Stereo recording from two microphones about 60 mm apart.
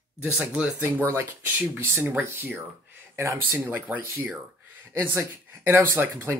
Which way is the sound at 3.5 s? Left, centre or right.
Right.